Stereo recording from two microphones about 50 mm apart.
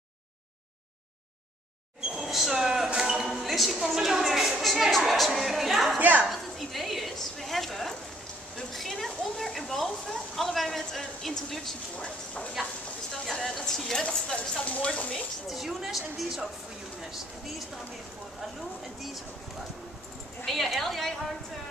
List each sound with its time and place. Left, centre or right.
2.1 s speech: centre
5.9 s a woman's voice: right
6.2 s a woman's voice: centre
13.1 s speech: centre
14.0 s speech: centre
15.4 s speech: centre
20.4 s speech: centre